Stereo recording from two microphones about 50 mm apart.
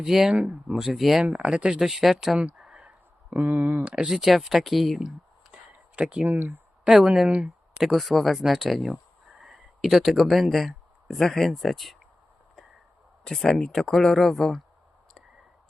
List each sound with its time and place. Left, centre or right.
0.0 s speech: centre
0.9 s speech: centre
1.5 s speech: centre
1.8 s speech: centre
2.6 s a sound: centre
3.4 s speech: right
3.8 s speech: centre
5.5 s a sound: right
6.2 s speech: right
6.8 s speech: centre
7.8 s speech: centre
9.4 s a sound: centre
11.2 s speech: centre
13.2 s speech: centre